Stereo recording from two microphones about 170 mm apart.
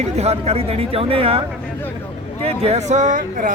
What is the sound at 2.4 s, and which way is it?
Speech, 40° right (ahead or behind).